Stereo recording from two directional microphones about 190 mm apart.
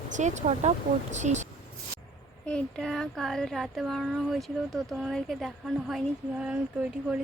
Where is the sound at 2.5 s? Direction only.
Centre (ahead or behind).